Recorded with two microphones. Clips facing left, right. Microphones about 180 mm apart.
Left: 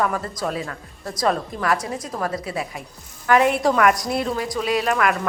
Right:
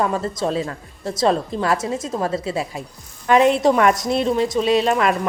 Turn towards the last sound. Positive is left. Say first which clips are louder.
# right 3 dB
turn(degrees=-25)  # may be behind; listen again after turning